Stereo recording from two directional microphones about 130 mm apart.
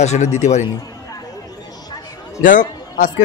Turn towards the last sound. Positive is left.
turn(degrees=90)